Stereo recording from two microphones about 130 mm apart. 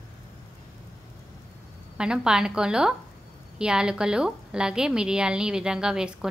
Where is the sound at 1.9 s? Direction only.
5° right (ahead or behind).